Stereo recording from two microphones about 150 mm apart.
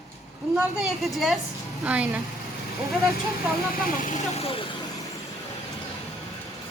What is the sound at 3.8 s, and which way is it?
Speech, 55° left (ahead or behind).